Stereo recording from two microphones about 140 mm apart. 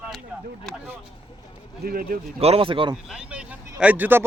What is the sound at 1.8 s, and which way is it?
Speech, 90° right.